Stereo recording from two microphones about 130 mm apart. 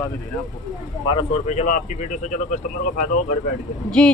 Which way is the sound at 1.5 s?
65° left (ahead or behind).